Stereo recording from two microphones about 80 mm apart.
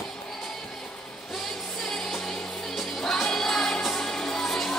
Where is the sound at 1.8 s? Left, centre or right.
Centre.